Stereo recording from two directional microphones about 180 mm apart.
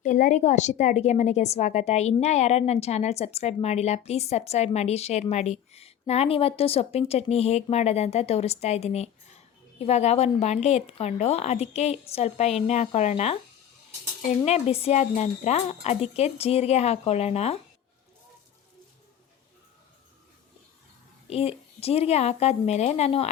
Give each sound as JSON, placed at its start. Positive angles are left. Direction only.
{"t": 0.0, "sound": "a woman's voice", "side_deg": 45}
{"t": 14.4, "sound": "a woman's voice", "side_deg": 35}
{"t": 21.2, "sound": "a woman's voice", "side_deg": 35}